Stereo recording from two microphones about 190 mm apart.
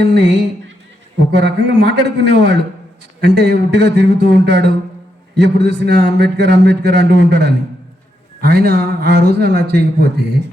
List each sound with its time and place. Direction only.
0.0 s a man's voice: 65° right (ahead or behind)